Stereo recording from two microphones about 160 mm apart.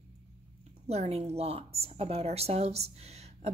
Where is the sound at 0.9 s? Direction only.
40° right (ahead or behind).